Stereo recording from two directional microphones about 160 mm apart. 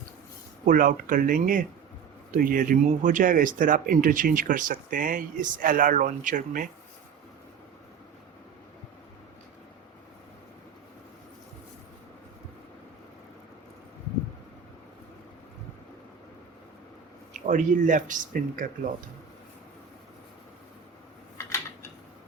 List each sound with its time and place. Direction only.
0.6 s speech: 55° right (ahead or behind)
17.5 s speech: 50° right (ahead or behind)
21.3 s a sound: 15° left (ahead or behind)